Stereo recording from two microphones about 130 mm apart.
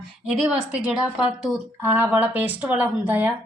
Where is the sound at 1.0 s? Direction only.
5° right (ahead or behind).